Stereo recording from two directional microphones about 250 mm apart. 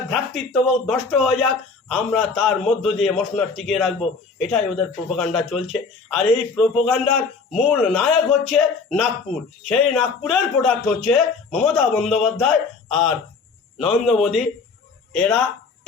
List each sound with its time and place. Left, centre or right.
0.1 s a man's voice: centre
13.7 s a man's voice: centre